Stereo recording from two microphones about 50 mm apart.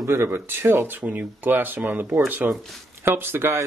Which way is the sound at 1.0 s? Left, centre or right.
Right.